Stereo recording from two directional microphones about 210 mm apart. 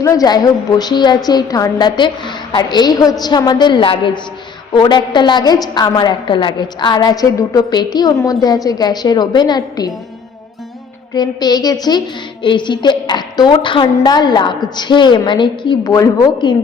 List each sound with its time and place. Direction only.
0.0 s a woman's voice: 15° left (ahead or behind)
11.1 s a woman's voice: 20° left (ahead or behind)